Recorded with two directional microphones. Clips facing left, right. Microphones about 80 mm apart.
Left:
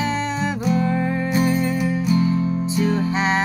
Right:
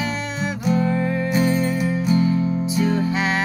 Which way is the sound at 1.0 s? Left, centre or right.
Left.